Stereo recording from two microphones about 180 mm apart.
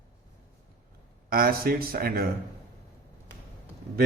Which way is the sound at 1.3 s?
55° right (ahead or behind).